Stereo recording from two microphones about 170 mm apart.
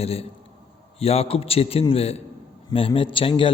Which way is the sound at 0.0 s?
35° left (ahead or behind).